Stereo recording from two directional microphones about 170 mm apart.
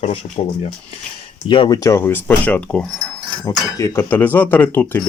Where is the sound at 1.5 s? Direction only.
25° left (ahead or behind); by 2.8 s 10° left (ahead or behind).